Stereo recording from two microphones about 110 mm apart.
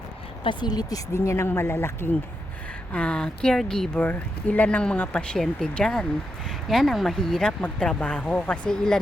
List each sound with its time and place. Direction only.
0.4 s speech: 40° left (ahead or behind); by 2.0 s 20° left (ahead or behind)
2.9 s speech: 10° left (ahead or behind)